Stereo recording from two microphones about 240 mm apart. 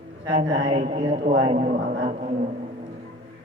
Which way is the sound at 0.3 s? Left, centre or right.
Right.